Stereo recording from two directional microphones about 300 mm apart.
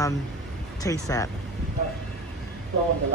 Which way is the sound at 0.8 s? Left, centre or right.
Centre.